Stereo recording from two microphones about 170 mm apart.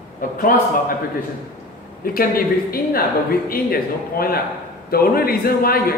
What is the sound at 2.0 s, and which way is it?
Speech, 60° left (ahead or behind).